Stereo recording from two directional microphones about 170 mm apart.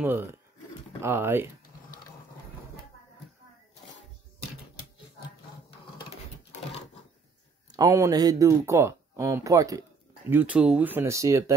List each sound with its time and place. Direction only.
0.0 s speech: 10° right (ahead or behind)
7.7 s speech: 20° right (ahead or behind)
10.3 s speech: 10° right (ahead or behind)